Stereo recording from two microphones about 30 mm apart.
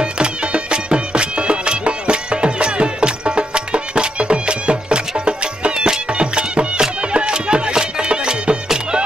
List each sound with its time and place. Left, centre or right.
0.0 s music: right